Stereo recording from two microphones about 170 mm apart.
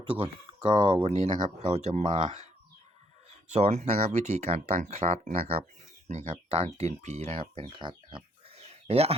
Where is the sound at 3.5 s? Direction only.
40° right (ahead or behind).